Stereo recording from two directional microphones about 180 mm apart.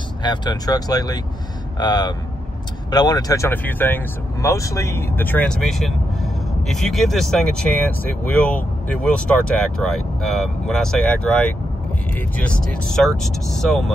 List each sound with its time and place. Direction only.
0.2 s speech: 25° left (ahead or behind); by 13.9 s centre (ahead or behind)